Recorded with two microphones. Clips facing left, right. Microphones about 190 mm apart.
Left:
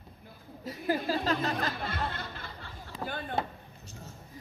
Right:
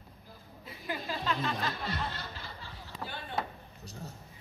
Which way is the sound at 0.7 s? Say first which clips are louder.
Left 8 dB; 40° left (ahead or behind).